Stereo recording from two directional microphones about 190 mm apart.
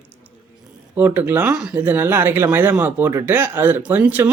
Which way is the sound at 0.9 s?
10° right (ahead or behind).